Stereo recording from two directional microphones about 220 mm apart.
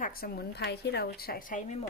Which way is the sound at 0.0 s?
40° left (ahead or behind).